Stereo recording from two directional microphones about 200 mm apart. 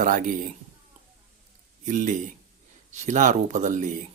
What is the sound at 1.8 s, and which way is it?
Speech, 40° right (ahead or behind).